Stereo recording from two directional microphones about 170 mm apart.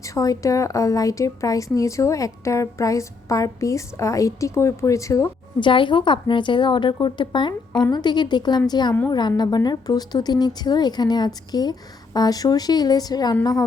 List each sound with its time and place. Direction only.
0.0 s a woman's voice: 20° left (ahead or behind)